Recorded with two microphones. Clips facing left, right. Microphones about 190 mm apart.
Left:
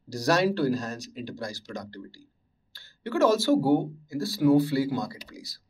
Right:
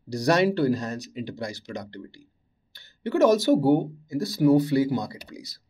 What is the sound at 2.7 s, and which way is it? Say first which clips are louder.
Speech: right 4 dB; 20° right (ahead or behind).